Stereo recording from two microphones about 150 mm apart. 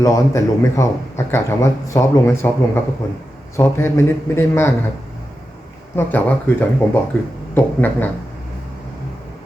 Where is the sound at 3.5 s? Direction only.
15° left (ahead or behind).